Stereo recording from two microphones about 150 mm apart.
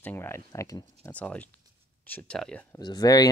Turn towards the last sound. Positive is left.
turn(degrees=25)  # may be behind; listen again after turning